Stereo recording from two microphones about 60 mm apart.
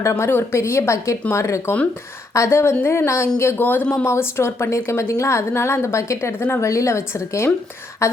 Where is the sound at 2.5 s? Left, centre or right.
Left.